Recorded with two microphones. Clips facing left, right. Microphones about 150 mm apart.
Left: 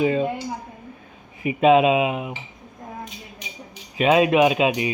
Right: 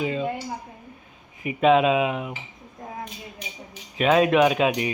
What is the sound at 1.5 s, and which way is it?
Speech, 10° left (ahead or behind).